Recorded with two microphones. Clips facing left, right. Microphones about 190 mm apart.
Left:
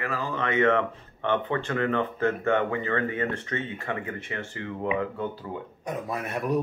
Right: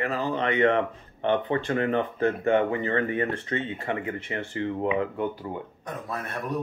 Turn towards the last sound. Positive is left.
turn(degrees=10)  # may be behind; listen again after turning